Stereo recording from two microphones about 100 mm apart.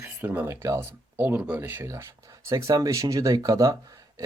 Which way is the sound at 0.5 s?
30° right (ahead or behind).